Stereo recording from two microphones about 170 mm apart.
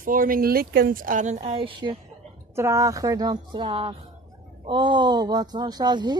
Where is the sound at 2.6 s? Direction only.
15° right (ahead or behind).